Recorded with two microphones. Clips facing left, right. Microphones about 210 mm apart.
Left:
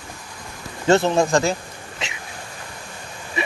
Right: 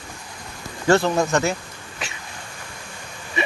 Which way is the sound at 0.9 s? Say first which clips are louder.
Left 1 dB; 25° left (ahead or behind).